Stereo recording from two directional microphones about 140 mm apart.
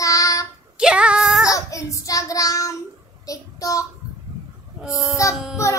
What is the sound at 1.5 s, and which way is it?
Child singing, 25° left (ahead or behind).